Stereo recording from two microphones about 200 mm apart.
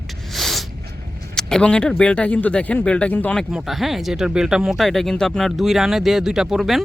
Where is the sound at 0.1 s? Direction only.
Centre (ahead or behind).